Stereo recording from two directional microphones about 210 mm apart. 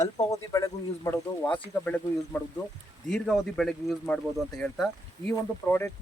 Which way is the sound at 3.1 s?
Centre (ahead or behind).